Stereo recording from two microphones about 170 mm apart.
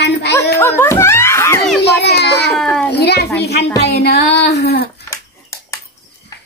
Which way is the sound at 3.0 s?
75° left (ahead or behind).